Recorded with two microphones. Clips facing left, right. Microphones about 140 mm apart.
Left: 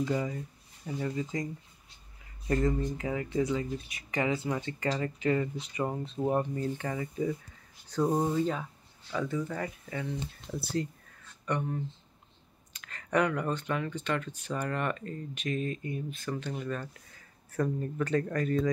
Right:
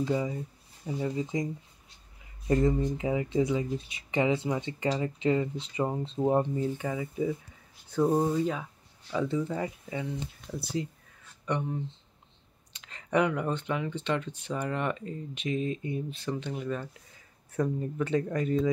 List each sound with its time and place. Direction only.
0.0 s speech: 15° right (ahead or behind)
9.3 s speech: 25° right (ahead or behind)